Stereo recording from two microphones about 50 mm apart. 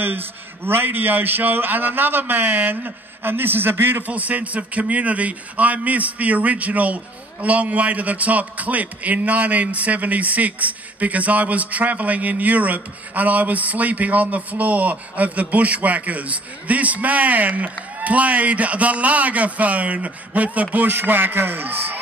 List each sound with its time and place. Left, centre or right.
0.0 s a man's voice: right
4.1 s a man's voice: right
20.7 s a man's voice: right